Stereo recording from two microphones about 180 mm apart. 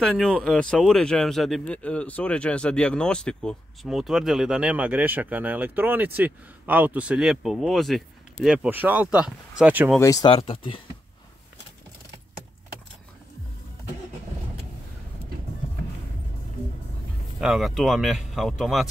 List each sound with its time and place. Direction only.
0.0 s speech: centre (ahead or behind)
9.9 s speech: 20° left (ahead or behind)
10.3 s speech: 30° left (ahead or behind)
17.4 s speech: centre (ahead or behind)